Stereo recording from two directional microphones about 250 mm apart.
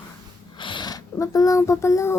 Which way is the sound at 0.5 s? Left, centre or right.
Centre.